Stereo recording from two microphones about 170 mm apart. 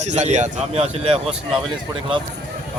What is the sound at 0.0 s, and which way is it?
Speech, 45° right (ahead or behind).